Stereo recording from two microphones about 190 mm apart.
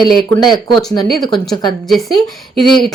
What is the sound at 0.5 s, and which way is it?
Speech, 20° left (ahead or behind).